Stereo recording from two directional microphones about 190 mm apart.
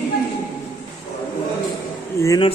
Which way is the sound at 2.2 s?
20° left (ahead or behind).